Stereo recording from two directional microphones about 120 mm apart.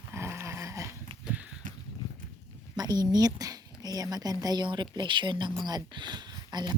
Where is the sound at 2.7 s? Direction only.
35° right (ahead or behind).